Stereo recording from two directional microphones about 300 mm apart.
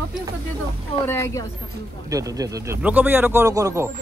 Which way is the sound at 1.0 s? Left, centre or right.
Centre.